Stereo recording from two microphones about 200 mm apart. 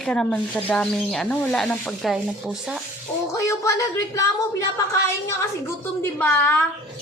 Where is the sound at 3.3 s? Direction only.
15° left (ahead or behind).